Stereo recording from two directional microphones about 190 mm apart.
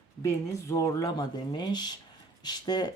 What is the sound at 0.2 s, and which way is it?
Speech, 15° left (ahead or behind).